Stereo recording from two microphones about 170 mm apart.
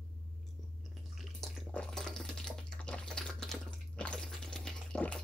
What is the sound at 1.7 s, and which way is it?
Typewriter, 5° left (ahead or behind).